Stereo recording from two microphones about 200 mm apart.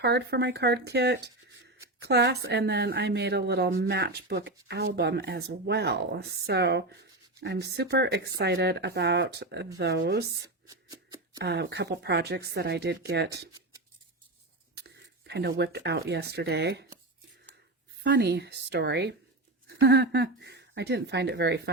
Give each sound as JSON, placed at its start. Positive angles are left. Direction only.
{"t": 0.0, "sound": "a woman's voice", "side_deg": -55}
{"t": 10.4, "sound": "a sound", "side_deg": -15}
{"t": 11.3, "sound": "a woman's voice", "side_deg": -55}
{"t": 14.8, "sound": "speech", "side_deg": -55}
{"t": 18.0, "sound": "a woman's voice", "side_deg": -55}